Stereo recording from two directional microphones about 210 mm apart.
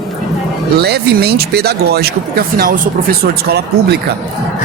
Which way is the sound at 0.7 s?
50° right (ahead or behind).